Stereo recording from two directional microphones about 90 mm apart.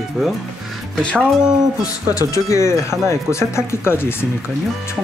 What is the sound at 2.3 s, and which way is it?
Speech, 35° left (ahead or behind).